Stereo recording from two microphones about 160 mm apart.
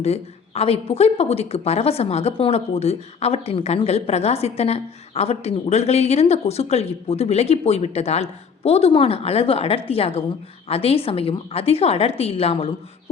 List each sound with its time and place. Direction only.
0.0 s speech: 40° left (ahead or behind)